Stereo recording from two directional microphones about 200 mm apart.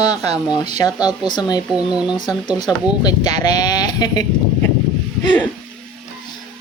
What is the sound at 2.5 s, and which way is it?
Speech, 20° left (ahead or behind).